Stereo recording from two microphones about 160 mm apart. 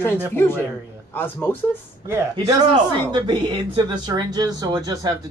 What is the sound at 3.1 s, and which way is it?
Speech, 30° right (ahead or behind).